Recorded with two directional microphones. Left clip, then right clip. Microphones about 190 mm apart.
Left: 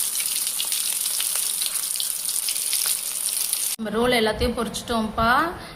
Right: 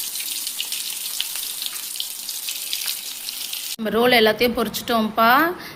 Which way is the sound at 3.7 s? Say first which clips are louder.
Right 5 dB; 20° right (ahead or behind).